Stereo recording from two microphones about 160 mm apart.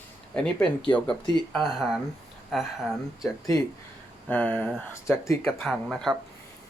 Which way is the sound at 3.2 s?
20° left (ahead or behind).